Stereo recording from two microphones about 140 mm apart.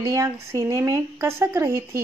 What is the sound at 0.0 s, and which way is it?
Speech, 20° right (ahead or behind).